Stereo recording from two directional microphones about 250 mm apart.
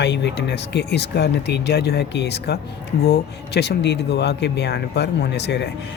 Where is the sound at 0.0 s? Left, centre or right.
Left.